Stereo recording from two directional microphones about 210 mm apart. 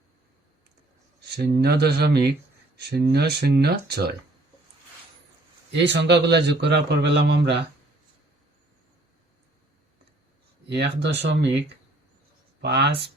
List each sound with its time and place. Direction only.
1.2 s a man's voice: 50° right (ahead or behind)
5.7 s a man's voice: 55° right (ahead or behind)
10.7 s a man's voice: 55° right (ahead or behind)
12.6 s a man's voice: 50° right (ahead or behind)